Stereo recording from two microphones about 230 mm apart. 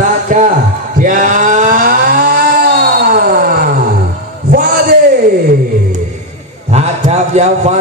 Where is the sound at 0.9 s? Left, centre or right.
Right.